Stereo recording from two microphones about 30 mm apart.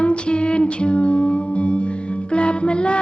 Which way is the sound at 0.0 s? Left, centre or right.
Left.